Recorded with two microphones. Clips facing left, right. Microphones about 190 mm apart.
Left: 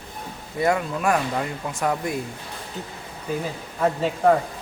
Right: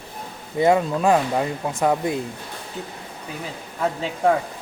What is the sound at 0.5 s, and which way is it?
Speech, 25° right (ahead or behind).